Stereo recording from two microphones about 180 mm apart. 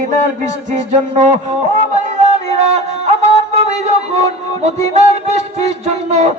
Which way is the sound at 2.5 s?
35° right (ahead or behind).